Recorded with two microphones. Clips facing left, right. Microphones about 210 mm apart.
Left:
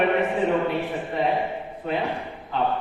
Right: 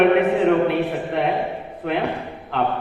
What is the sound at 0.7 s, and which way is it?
A man's voice, 70° right (ahead or behind).